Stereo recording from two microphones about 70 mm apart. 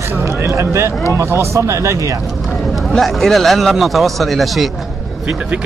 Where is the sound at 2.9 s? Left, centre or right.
Centre.